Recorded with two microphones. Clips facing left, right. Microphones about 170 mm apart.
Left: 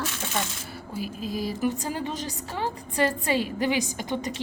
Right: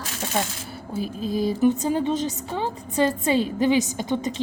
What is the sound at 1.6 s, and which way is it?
A woman's voice, 25° right (ahead or behind).